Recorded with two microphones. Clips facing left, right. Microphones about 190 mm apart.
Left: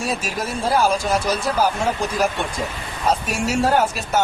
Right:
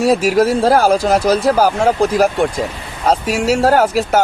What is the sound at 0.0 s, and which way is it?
Speech, 80° right.